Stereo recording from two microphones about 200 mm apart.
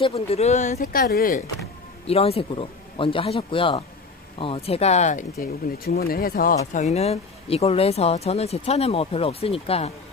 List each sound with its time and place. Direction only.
0.0 s speech: 30° left (ahead or behind)
0.7 s speech: 50° left (ahead or behind)
2.0 s speech: 30° left (ahead or behind)
5.4 s speech: 50° left (ahead or behind)
6.6 s speech: 35° left (ahead or behind)